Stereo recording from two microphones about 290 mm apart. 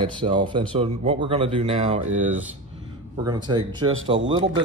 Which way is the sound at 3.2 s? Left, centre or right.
Centre.